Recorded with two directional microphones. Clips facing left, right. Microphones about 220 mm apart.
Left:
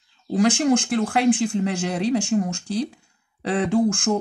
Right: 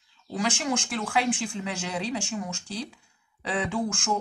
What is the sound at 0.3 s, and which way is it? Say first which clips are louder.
Speech: left 10 dB; 50° left (ahead or behind).